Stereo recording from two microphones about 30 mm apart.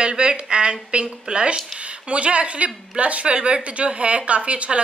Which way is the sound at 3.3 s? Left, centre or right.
Right.